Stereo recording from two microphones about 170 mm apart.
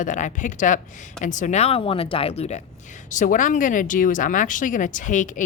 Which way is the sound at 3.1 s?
50° left (ahead or behind).